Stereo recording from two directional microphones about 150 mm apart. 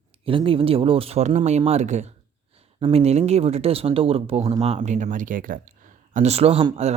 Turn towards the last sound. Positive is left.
turn(degrees=-40)  # may be behind; listen again after turning